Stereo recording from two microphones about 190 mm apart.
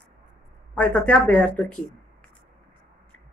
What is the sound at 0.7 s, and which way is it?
Speech, 5° left (ahead or behind).